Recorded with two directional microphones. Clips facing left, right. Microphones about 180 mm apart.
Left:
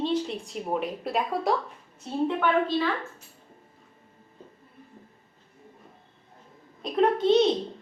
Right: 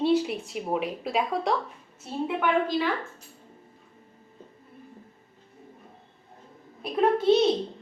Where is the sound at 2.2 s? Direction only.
15° right (ahead or behind).